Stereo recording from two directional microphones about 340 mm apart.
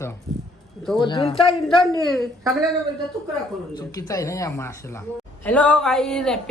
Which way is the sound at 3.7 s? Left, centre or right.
Centre.